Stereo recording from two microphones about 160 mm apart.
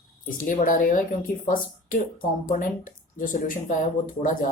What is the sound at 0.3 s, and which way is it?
Speech, 55° left (ahead or behind).